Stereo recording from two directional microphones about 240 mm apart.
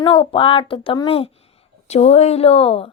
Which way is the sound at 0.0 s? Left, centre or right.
Centre.